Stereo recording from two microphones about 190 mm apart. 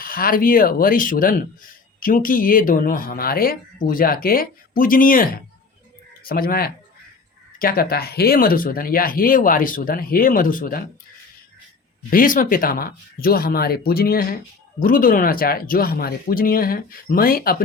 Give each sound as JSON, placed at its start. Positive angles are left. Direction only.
{"t": 0.0, "sound": "speech", "side_deg": 50}
{"t": 12.1, "sound": "speech", "side_deg": 45}